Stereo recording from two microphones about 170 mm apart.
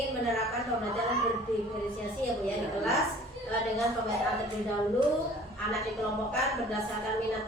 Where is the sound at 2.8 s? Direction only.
Centre (ahead or behind).